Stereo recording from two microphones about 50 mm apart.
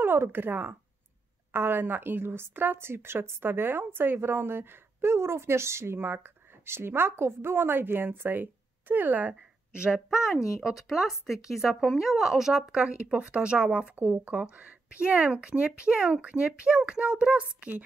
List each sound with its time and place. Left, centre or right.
0.0 s a woman's voice: right
5.9 s a woman's voice: right
9.8 s speech: centre
10.0 s speech: centre
12.7 s speech: right
13.9 s speech: right
14.3 s speech: right